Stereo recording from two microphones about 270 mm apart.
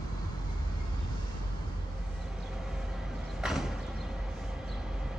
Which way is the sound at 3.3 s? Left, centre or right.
Centre.